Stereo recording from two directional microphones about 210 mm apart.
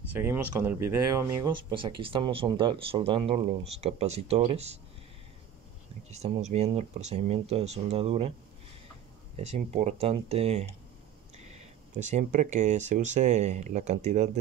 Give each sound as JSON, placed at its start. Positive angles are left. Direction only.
{"t": 0.1, "sound": "speech", "side_deg": -10}
{"t": 6.0, "sound": "speech", "side_deg": -30}
{"t": 9.5, "sound": "speech", "side_deg": -30}
{"t": 12.0, "sound": "speech", "side_deg": -35}